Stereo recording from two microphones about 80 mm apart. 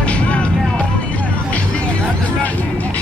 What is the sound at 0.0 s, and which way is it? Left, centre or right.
Music, centre.